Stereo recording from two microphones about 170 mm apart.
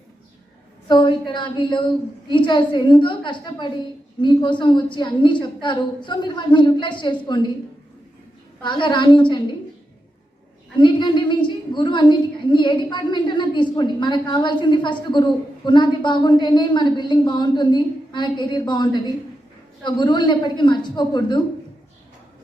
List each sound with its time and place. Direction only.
0.9 s a woman's voice: 25° left (ahead or behind)
8.6 s a woman's voice: 25° left (ahead or behind)
10.8 s a woman's voice: 25° left (ahead or behind)